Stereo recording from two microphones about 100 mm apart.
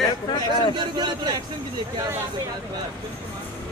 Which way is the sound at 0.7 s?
45° right (ahead or behind).